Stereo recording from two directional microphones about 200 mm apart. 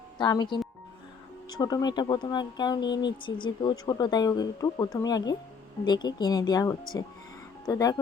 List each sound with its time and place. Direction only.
0.2 s speech: 20° left (ahead or behind)